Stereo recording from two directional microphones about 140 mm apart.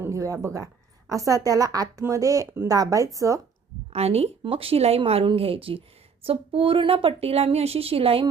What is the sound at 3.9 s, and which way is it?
A woman's voice, 50° right (ahead or behind).